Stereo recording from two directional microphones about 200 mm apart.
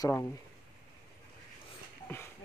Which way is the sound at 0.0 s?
15° left (ahead or behind).